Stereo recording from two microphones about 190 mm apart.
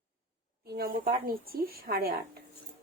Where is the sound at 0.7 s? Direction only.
50° right (ahead or behind).